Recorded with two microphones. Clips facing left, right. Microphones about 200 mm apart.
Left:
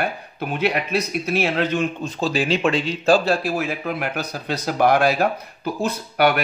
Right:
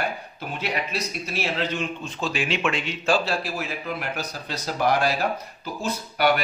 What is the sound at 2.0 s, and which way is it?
Speech, 35° left (ahead or behind).